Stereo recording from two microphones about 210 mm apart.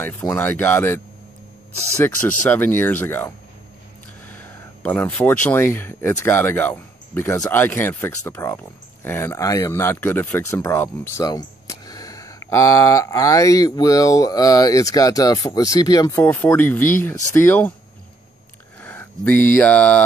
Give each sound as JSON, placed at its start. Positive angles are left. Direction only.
{"t": 0.0, "sound": "speech", "side_deg": 10}
{"t": 18.8, "sound": "speech", "side_deg": 5}